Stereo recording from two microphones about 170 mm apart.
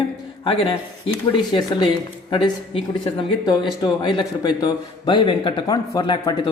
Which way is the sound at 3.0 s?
25° left (ahead or behind).